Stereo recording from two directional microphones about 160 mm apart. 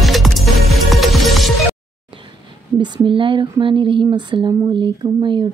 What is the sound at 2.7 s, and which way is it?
Speech, 30° right (ahead or behind).